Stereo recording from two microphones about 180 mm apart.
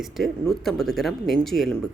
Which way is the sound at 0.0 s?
Centre (ahead or behind).